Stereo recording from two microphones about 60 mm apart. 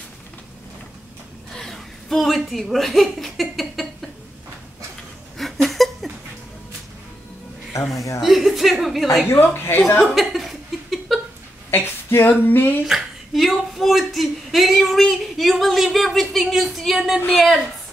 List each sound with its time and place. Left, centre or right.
1.5 s a woman's voice: centre
5.4 s a sound: centre
7.9 s speech: left
8.2 s a woman's voice: centre
9.3 s a woman's voice: left
10.1 s laughter: centre
11.7 s a sound: left
12.8 s speech: centre